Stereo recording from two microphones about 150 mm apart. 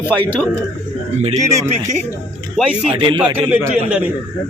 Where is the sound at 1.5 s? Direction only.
20° right (ahead or behind).